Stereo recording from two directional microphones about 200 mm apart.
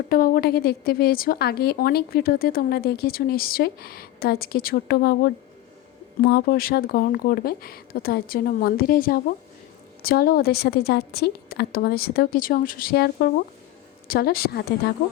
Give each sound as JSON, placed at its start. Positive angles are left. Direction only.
{"t": 0.1, "sound": "a woman's voice", "side_deg": 45}